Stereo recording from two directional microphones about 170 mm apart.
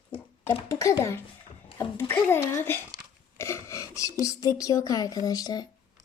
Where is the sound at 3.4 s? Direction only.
15° left (ahead or behind).